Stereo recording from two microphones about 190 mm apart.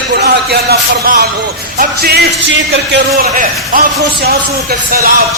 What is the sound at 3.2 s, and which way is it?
Speech, 50° right (ahead or behind).